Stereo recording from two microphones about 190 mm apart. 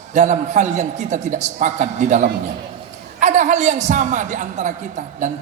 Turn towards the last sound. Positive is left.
turn(degrees=-40)  # may be behind; listen again after turning